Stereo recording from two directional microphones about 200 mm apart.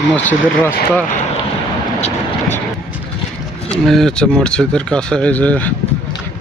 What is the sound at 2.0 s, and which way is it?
Vehicle, 35° left (ahead or behind).